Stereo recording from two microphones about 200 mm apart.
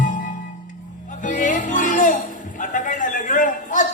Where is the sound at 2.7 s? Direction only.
40° left (ahead or behind).